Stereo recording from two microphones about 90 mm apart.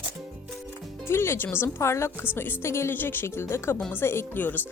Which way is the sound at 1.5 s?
30° left (ahead or behind).